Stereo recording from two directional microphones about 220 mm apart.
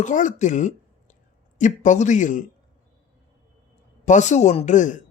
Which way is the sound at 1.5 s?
35° left (ahead or behind).